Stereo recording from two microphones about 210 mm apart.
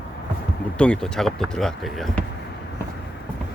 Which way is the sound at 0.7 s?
5° left (ahead or behind).